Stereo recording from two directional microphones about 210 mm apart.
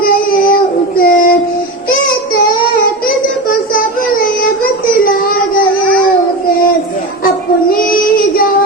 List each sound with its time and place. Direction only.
0.0 s child singing: 45° left (ahead or behind)
3.8 s child singing: 40° left (ahead or behind)
7.3 s child singing: 45° left (ahead or behind)